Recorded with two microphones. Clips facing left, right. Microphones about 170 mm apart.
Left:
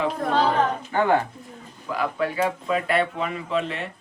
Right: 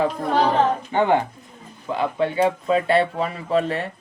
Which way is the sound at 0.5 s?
20° right (ahead or behind).